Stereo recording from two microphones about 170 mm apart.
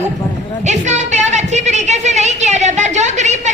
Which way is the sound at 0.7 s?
45° right (ahead or behind).